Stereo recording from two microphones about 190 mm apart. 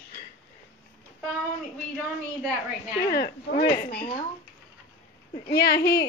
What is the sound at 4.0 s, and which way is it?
Speech, 30° left (ahead or behind).